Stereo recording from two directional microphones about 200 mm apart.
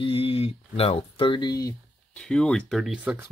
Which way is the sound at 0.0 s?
25° left (ahead or behind).